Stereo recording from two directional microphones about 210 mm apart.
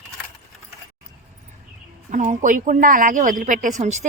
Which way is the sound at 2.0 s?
35° right (ahead or behind).